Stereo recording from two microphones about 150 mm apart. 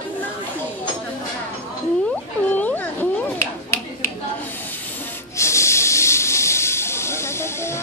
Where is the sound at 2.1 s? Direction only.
10° left (ahead or behind).